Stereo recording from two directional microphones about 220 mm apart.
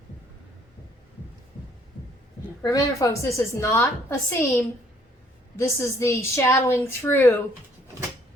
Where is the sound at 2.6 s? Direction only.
15° left (ahead or behind).